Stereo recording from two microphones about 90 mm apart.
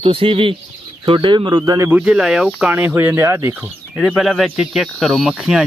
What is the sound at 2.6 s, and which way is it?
Speech, 20° right (ahead or behind).